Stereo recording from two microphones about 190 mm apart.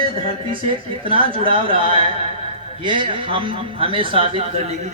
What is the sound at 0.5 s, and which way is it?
A man's voice, 25° right (ahead or behind).